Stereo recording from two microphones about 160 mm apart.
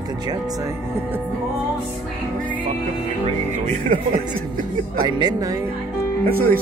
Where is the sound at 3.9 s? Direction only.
60° right (ahead or behind).